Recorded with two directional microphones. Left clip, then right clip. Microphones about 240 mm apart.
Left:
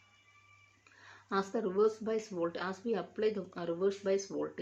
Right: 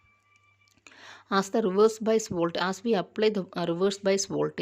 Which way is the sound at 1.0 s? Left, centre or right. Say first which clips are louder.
Right 8 dB; right.